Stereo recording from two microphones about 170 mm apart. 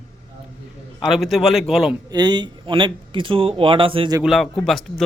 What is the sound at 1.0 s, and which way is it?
Speech, centre (ahead or behind).